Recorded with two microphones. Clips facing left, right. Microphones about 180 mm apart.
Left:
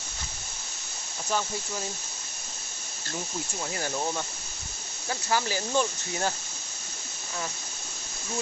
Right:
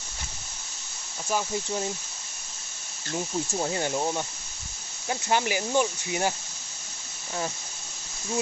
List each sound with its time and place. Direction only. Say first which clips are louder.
3.7 s speech: right 4 dB; 20° right (ahead or behind)